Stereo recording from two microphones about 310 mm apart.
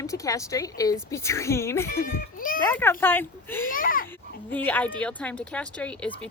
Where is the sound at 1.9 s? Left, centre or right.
Left.